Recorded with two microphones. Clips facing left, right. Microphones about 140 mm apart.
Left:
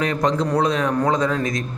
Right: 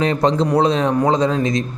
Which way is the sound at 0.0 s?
30° right (ahead or behind).